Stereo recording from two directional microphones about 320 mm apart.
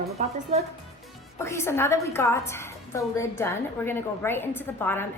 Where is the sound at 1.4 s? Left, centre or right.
Centre.